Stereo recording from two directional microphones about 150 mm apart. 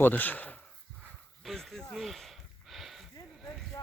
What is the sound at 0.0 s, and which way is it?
Speech, 10° left (ahead or behind).